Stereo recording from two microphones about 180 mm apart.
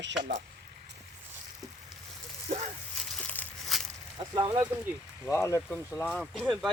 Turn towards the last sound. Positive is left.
turn(degrees=0)  # may be behind; listen again after turning